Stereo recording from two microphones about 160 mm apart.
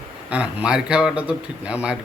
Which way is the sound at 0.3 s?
5° right (ahead or behind).